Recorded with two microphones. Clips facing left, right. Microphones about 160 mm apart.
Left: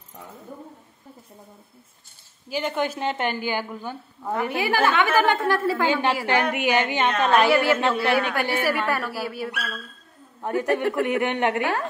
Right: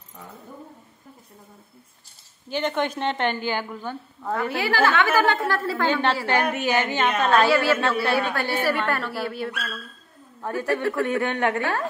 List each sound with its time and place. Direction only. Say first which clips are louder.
2.5 s a woman's voice: right 1 dB; 5° left (ahead or behind)